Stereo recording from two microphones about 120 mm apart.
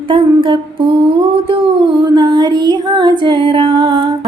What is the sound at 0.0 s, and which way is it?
Humming, 45° right (ahead or behind).